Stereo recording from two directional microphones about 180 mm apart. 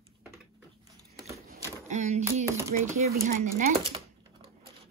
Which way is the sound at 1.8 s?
40° right (ahead or behind).